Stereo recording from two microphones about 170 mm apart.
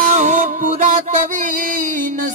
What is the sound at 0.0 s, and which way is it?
Music, 45° right (ahead or behind).